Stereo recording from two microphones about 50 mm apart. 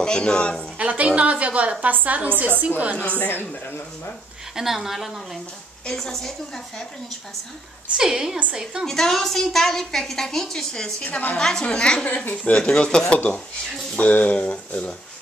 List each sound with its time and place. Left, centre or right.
0.0 s speech: centre
0.7 s a woman's voice: right
3.0 s a woman's voice: left
4.6 s a woman's voice: centre
8.0 s a woman's voice: centre
8.8 s a woman's voice: centre
11.1 s a woman's voice: left
11.3 s a woman's voice: centre